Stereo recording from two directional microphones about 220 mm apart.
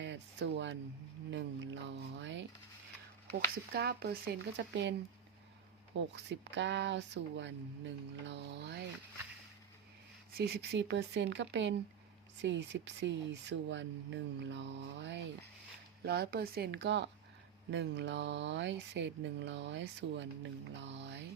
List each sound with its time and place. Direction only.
0.0 s a sound: 55° right (ahead or behind)
3.7 s speech: 50° right (ahead or behind)
6.1 s speech: 55° right (ahead or behind)
10.3 s speech: 45° right (ahead or behind)